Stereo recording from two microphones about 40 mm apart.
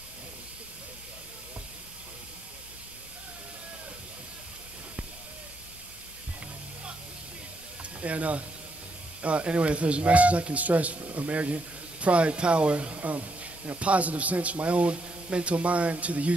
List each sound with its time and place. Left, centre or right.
8.0 s speech: right